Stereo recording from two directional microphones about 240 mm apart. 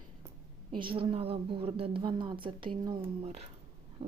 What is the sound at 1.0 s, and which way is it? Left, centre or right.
A woman's voice, right.